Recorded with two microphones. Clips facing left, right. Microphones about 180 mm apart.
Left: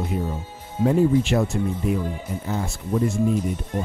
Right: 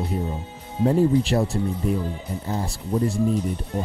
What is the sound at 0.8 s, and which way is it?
Speech, 35° right (ahead or behind).